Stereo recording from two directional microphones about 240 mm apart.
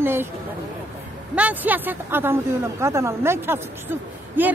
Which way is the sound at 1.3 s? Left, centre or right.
Centre.